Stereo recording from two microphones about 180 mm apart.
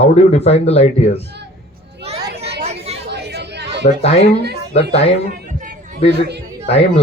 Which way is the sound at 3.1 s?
65° right (ahead or behind).